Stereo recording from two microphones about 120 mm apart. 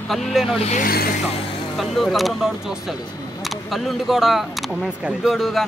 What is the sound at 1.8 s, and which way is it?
Speech, centre (ahead or behind).